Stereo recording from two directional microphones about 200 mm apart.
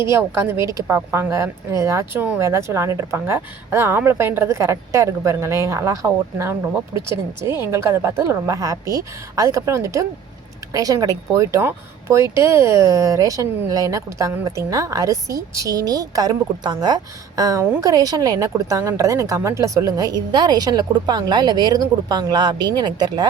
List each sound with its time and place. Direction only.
0.0 s speech: 15° right (ahead or behind)